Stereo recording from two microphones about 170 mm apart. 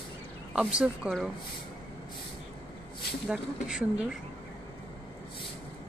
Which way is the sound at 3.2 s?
5° right (ahead or behind).